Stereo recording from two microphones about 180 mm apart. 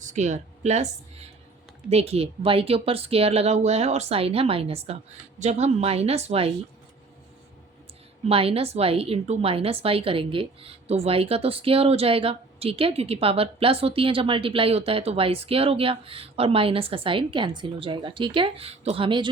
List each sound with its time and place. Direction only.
0.0 s speech: 40° right (ahead or behind)
1.9 s a woman's voice: 35° right (ahead or behind)
8.3 s a woman's voice: 30° right (ahead or behind)